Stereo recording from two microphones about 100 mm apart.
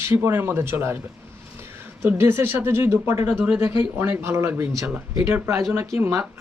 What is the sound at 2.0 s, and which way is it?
Speech, 25° right (ahead or behind).